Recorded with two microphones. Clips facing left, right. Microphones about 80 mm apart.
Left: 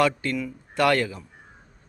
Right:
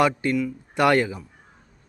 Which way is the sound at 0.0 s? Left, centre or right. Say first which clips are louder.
Right 2 dB; centre.